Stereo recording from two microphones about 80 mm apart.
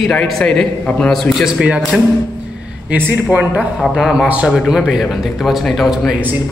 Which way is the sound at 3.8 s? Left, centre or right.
Centre.